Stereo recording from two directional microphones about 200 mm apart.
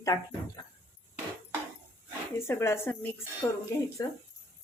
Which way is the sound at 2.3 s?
15° left (ahead or behind).